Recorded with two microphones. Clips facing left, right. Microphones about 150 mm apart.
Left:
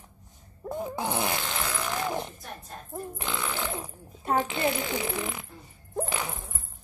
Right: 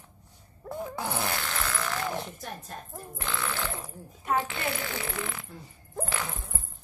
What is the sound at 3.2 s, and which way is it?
Burping, 15° left (ahead or behind).